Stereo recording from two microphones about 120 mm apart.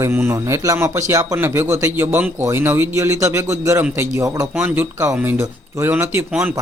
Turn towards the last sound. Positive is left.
turn(degrees=-15)  # may be behind; listen again after turning